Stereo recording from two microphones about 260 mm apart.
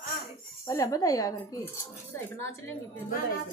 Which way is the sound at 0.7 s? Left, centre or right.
Centre.